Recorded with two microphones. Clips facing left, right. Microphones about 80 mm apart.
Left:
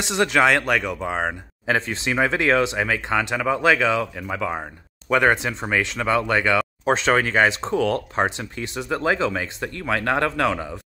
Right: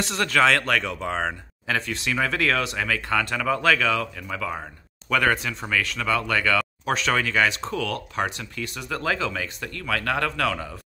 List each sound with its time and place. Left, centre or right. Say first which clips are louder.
0.0 s speech: left 2 dB; centre
1.7 s speech: left 4 dB; left